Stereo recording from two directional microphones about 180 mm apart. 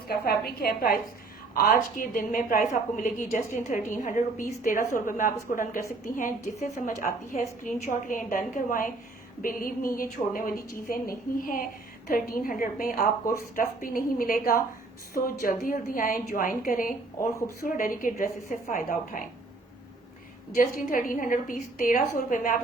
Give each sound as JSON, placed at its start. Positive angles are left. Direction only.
{"t": 0.1, "sound": "a woman's voice", "side_deg": 60}
{"t": 17.2, "sound": "speech", "side_deg": 15}
{"t": 17.7, "sound": "a woman's voice", "side_deg": 50}
{"t": 20.6, "sound": "a woman's voice", "side_deg": 50}